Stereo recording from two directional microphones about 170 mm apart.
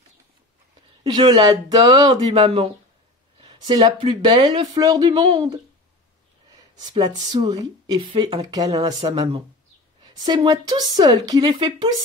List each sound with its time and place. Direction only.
1.0 s speech: 25° right (ahead or behind)
6.8 s speech: 25° right (ahead or behind)
10.2 s speech: 25° right (ahead or behind)